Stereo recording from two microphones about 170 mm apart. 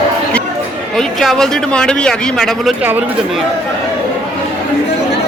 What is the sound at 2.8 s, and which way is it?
Speech, 10° right (ahead or behind).